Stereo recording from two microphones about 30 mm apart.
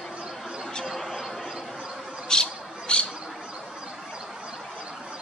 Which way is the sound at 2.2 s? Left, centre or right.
Left.